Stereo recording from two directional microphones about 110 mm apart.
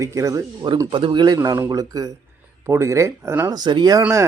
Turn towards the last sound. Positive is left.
turn(degrees=-40)  # may be behind; listen again after turning